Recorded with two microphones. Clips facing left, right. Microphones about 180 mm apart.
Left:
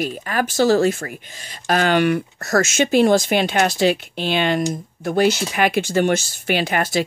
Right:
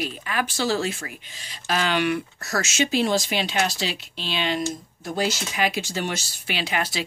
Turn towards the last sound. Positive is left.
turn(degrees=50)  # may be behind; listen again after turning